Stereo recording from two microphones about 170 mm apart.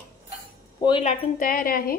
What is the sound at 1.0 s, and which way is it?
Speech, 50° left (ahead or behind).